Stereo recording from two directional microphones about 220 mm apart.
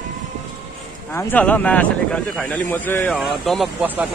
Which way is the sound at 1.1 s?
5° left (ahead or behind).